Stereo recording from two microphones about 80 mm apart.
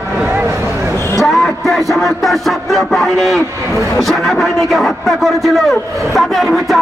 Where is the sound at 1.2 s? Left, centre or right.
Centre.